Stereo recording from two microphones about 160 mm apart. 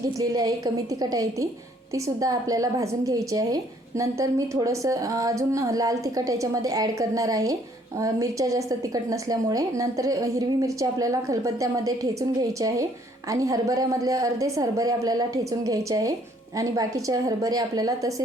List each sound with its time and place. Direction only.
0.2 s a woman's voice: 25° right (ahead or behind)